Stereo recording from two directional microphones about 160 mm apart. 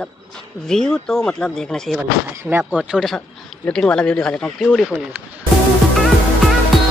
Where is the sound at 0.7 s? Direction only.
5° left (ahead or behind).